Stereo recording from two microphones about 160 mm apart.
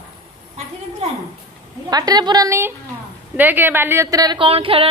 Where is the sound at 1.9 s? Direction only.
25° right (ahead or behind).